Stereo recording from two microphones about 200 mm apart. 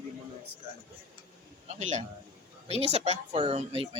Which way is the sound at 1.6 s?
35° right (ahead or behind).